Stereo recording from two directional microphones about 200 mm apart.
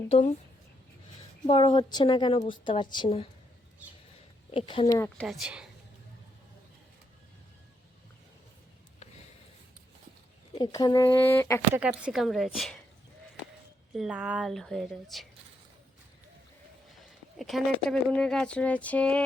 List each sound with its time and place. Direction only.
0.1 s speech: 35° left (ahead or behind)
1.5 s a woman's voice: 25° left (ahead or behind)
4.5 s a woman's voice: 25° left (ahead or behind)
4.9 s speech: 5° left (ahead or behind)
10.6 s speech: 20° left (ahead or behind)
11.7 s speech: 5° right (ahead or behind)
13.9 s speech: 5° right (ahead or behind)
17.3 s speech: centre (ahead or behind)